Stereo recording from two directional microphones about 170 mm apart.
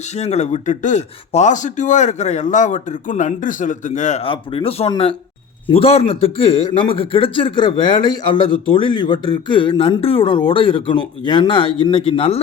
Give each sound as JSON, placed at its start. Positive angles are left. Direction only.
{"t": 0.2, "sound": "speech", "side_deg": 40}
{"t": 4.3, "sound": "a man's voice", "side_deg": 35}